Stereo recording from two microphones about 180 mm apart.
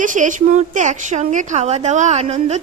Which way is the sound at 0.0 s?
45° right (ahead or behind).